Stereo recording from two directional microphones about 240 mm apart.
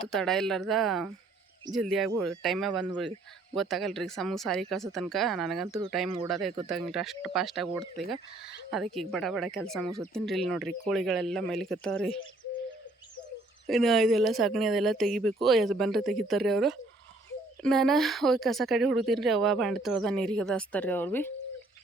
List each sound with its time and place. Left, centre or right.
0.0 s speech: centre
13.7 s speech: centre